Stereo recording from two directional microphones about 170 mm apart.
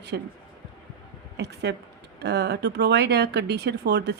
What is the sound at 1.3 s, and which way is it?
A woman's voice, 80° right.